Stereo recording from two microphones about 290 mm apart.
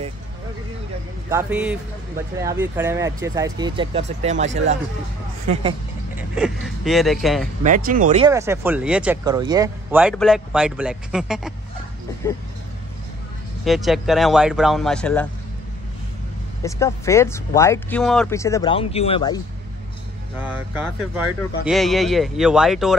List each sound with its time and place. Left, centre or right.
1.3 s speech: centre; by 4.5 s right
5.5 s speech: centre
6.3 s speech: centre
7.6 s speech: right
8.3 s speech: centre
13.7 s speech: centre
16.6 s speech: centre
20.3 s speech: centre